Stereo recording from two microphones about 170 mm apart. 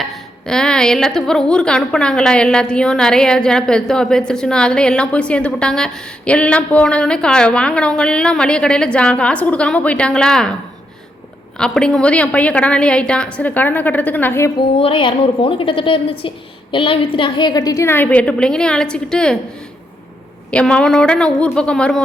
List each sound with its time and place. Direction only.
0.0 s a woman's voice: centre (ahead or behind)
11.5 s a woman's voice: 5° left (ahead or behind)
14.8 s a woman's voice: 30° left (ahead or behind); by 19.4 s 5° left (ahead or behind)
20.5 s a woman's voice: 5° left (ahead or behind)